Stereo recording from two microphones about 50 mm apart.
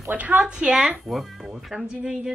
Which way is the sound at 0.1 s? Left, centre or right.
Right.